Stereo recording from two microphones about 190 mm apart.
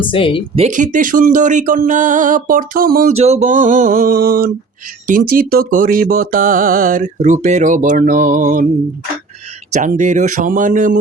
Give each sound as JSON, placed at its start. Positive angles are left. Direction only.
{"t": 0.0, "sound": "speech", "side_deg": 25}
{"t": 0.5, "sound": "speech", "side_deg": -40}
{"t": 3.1, "sound": "speech", "side_deg": -35}
{"t": 9.7, "sound": "speech", "side_deg": -40}